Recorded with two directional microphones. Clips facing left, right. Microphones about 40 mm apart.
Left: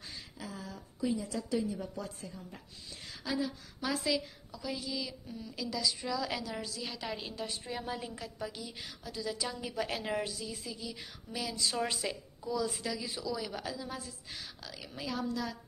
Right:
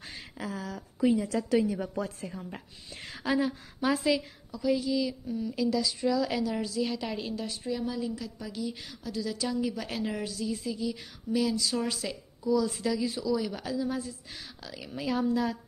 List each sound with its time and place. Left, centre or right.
0.0 s a sound: right
0.5 s a woman's voice: right
2.0 s a woman's voice: right
3.8 s a woman's voice: centre
4.5 s a woman's voice: centre
7.3 s a woman's voice: centre
7.7 s a woman's voice: left
8.5 s a woman's voice: centre
15.0 s a woman's voice: centre